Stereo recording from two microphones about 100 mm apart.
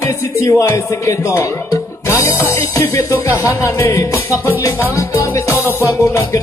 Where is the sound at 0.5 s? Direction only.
30° left (ahead or behind).